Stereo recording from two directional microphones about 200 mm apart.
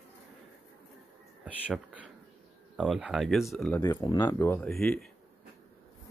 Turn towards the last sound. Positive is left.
turn(degrees=5)  # may be behind; listen again after turning